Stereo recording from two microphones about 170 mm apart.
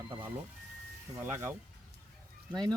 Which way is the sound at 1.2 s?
15° right (ahead or behind).